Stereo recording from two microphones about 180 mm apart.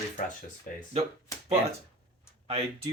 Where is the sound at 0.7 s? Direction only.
50° left (ahead or behind).